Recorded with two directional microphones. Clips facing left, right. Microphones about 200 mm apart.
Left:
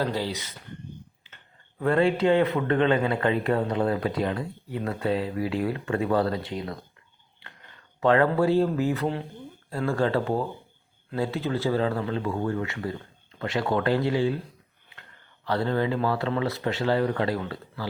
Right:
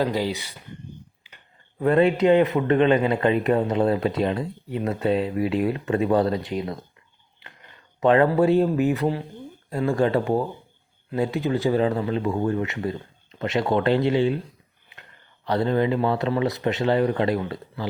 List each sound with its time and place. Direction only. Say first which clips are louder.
0.0 s speech: right 4 dB; 15° right (ahead or behind)
1.2 s a sound: right 1 dB; 15° right (ahead or behind)
1.8 s a man's voice: right 4 dB; 20° right (ahead or behind)
8.0 s a man's voice: right 3 dB; 20° right (ahead or behind)
15.4 s a man's voice: right 4 dB; 20° right (ahead or behind)